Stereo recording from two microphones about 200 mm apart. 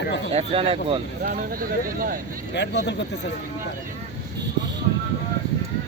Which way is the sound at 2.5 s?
60° left (ahead or behind).